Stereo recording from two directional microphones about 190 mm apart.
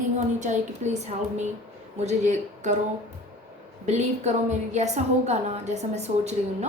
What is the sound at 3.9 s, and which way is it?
A woman's voice, 35° right (ahead or behind).